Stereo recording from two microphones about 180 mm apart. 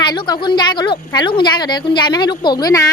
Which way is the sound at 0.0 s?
25° left (ahead or behind).